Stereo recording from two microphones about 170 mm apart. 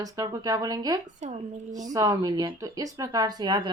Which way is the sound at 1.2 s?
40° right (ahead or behind).